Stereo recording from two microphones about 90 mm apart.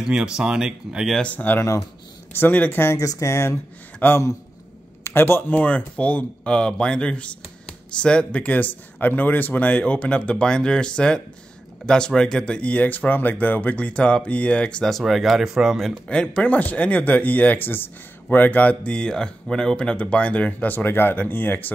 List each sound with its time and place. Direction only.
0.0 s speech: 10° right (ahead or behind)
1.1 s speech: 15° left (ahead or behind)
1.6 s speech: 35° left (ahead or behind)
2.3 s speech: 20° left (ahead or behind); by 16.0 s centre (ahead or behind)
16.1 s speech: 10° left (ahead or behind)